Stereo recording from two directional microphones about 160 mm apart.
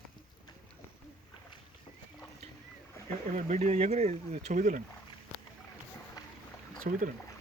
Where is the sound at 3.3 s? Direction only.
45° right (ahead or behind).